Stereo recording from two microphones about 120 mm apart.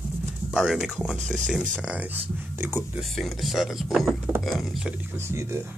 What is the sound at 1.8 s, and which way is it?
Speech, 10° right (ahead or behind).